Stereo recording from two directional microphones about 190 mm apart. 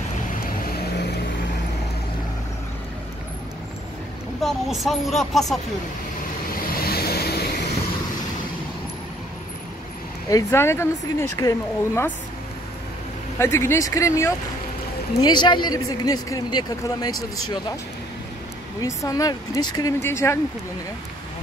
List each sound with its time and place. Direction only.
4.4 s speech: centre (ahead or behind)
6.7 s vehicle: 55° left (ahead or behind)
10.3 s speech: 15° left (ahead or behind)
13.4 s a man's voice: 15° left (ahead or behind)
18.8 s speech: 15° left (ahead or behind)